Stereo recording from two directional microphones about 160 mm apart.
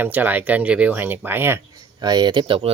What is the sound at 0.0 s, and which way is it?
Speech, 10° right (ahead or behind).